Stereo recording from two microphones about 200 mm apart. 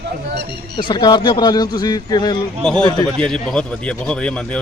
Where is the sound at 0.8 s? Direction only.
25° left (ahead or behind).